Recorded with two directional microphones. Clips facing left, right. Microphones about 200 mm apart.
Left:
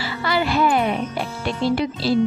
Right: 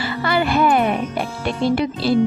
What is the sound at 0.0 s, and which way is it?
Speech, 55° right (ahead or behind).